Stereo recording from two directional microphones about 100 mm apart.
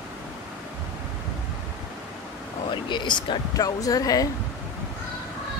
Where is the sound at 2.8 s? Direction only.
50° left (ahead or behind).